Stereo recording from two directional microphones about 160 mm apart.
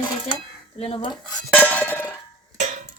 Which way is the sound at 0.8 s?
35° left (ahead or behind).